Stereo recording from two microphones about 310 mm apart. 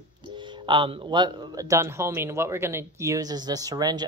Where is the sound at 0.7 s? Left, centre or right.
Centre.